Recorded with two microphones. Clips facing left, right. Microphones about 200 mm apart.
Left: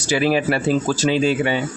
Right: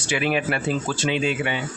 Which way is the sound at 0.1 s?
35° left (ahead or behind).